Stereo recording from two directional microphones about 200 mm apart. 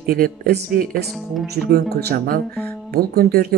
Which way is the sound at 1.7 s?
50° right (ahead or behind).